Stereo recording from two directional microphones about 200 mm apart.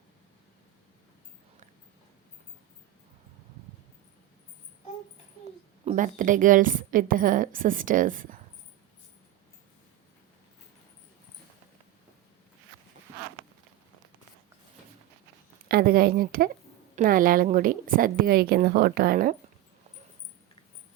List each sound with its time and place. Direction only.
5.8 s a woman's voice: 40° right (ahead or behind)
15.7 s a woman's voice: 45° right (ahead or behind)